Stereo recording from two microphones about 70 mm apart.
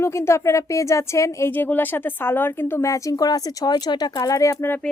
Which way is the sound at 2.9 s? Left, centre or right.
Left.